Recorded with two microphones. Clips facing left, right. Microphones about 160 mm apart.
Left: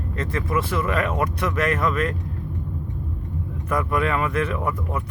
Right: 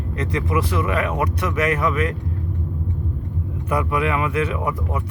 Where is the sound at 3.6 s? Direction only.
15° right (ahead or behind).